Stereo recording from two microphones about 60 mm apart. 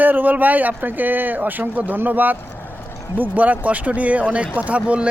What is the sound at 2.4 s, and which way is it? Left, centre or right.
Boat, left.